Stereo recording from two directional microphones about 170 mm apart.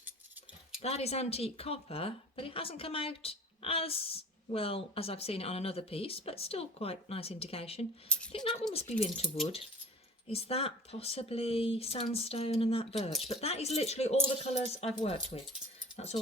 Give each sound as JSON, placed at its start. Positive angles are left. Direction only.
{"t": 0.8, "sound": "speech", "side_deg": 40}
{"t": 8.1, "sound": "a sound", "side_deg": 5}
{"t": 8.7, "sound": "speech", "side_deg": 35}